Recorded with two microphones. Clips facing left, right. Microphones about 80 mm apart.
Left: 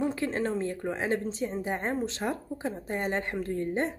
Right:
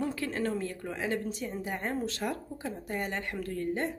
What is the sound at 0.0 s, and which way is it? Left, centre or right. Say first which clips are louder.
A woman's voice: left 3 dB; left.